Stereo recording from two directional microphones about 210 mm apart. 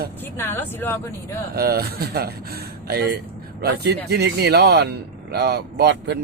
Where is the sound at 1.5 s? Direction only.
45° right (ahead or behind).